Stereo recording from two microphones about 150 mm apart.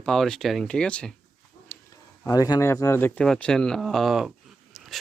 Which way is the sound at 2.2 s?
25° left (ahead or behind).